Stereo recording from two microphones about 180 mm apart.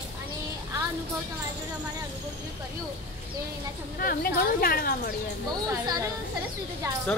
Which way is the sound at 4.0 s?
55° left (ahead or behind).